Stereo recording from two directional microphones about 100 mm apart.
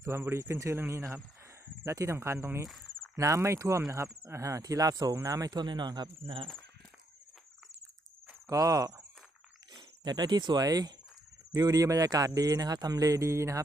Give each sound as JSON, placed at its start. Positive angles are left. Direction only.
{"t": 0.0, "sound": "speech", "side_deg": -25}
{"t": 2.6, "sound": "cricket", "side_deg": 0}
{"t": 3.2, "sound": "speech", "side_deg": -30}
{"t": 8.4, "sound": "speech", "side_deg": -35}